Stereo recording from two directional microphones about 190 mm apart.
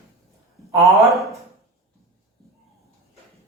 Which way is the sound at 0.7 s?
15° right (ahead or behind).